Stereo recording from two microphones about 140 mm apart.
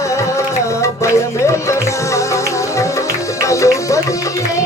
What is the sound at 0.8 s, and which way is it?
Music, 20° left (ahead or behind).